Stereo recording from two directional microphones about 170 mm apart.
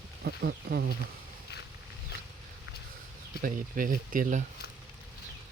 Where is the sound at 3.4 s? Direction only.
55° right (ahead or behind).